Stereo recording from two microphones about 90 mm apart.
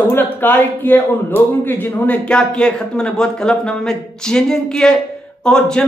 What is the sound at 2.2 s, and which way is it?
A man's voice, 10° left (ahead or behind).